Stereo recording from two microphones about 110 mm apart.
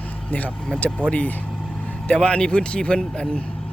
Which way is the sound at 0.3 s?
15° left (ahead or behind).